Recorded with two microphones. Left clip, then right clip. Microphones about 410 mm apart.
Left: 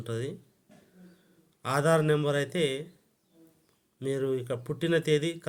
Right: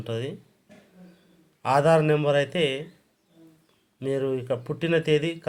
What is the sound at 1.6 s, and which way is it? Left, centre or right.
Speech, left.